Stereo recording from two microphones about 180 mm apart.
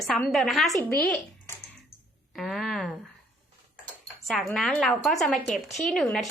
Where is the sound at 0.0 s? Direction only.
Centre (ahead or behind).